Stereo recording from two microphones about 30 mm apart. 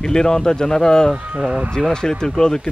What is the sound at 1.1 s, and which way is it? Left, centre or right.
Speech, right.